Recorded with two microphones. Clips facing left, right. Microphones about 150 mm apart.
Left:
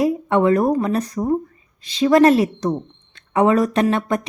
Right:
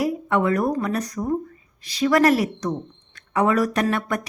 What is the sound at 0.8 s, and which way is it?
Speech, 30° left (ahead or behind).